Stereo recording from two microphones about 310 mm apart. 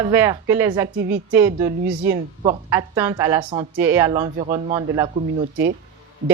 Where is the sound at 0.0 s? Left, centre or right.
Centre.